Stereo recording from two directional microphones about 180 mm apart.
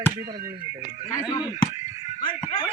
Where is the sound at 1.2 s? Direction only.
25° left (ahead or behind).